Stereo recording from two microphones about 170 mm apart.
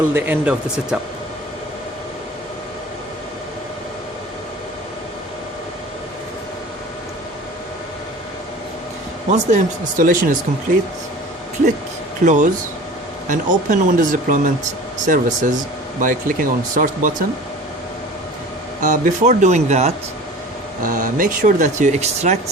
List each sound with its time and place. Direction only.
0.1 s speech: 10° right (ahead or behind)
9.3 s speech: 45° right (ahead or behind)
12.2 s speech: 45° right (ahead or behind)
18.8 s speech: 45° right (ahead or behind)